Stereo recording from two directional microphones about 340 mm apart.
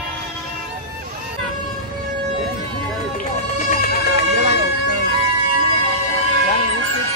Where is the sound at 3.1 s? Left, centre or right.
Left.